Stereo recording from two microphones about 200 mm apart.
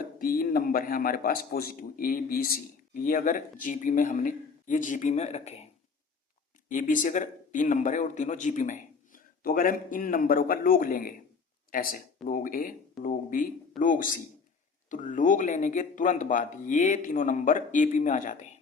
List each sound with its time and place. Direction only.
0.2 s a man's voice: 45° left (ahead or behind)
6.7 s a man's voice: 40° left (ahead or behind)